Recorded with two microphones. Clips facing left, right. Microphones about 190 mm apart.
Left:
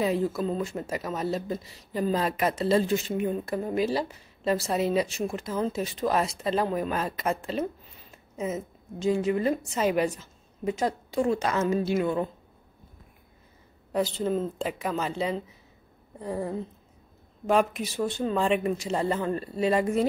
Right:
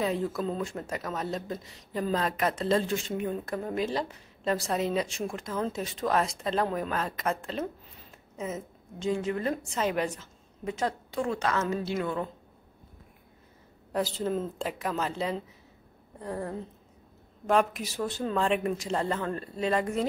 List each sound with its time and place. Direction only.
0.0 s a man's voice: 5° left (ahead or behind)
13.9 s a man's voice: centre (ahead or behind)